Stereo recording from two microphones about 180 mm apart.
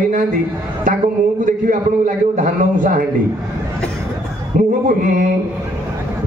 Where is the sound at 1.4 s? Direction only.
45° right (ahead or behind).